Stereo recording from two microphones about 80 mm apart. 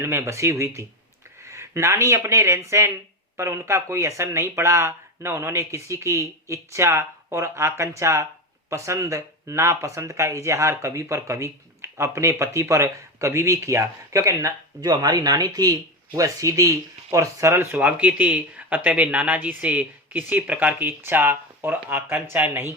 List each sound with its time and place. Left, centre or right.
0.0 s speech: right